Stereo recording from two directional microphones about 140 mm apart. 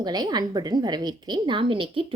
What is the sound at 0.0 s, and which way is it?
A woman's voice, 30° right (ahead or behind).